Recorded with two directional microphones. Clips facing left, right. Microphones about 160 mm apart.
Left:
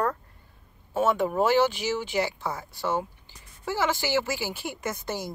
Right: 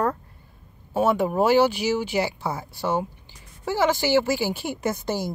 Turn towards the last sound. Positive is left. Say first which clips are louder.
# right 6 dB
turn(degrees=-30)  # may be behind; listen again after turning